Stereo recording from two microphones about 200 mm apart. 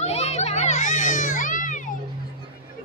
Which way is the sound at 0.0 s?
30° left (ahead or behind).